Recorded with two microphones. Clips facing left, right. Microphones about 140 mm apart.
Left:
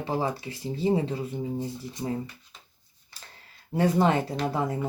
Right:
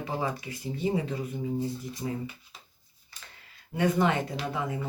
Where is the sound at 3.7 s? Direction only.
35° left (ahead or behind).